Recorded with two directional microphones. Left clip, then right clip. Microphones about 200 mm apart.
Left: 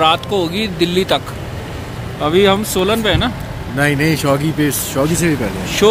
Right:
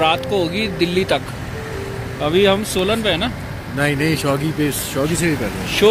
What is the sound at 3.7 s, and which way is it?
Speech, 30° left (ahead or behind).